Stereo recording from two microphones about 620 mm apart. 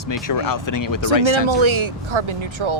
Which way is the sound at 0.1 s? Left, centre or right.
Left.